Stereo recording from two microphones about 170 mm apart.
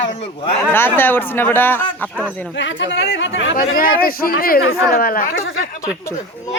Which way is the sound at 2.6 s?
90° left.